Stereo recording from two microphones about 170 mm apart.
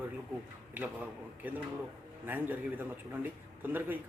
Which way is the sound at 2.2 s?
10° right (ahead or behind).